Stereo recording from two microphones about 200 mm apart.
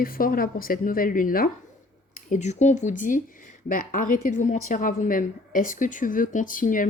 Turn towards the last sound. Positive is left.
turn(degrees=40)  # may be behind; listen again after turning